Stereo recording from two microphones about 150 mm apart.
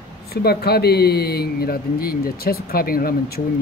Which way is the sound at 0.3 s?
90° left.